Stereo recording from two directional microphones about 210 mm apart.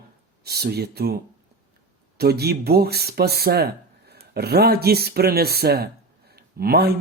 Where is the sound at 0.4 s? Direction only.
50° right (ahead or behind).